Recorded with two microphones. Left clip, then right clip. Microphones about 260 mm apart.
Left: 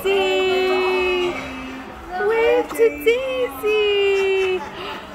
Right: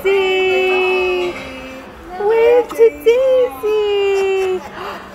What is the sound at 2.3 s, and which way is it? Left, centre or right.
Child singing, centre.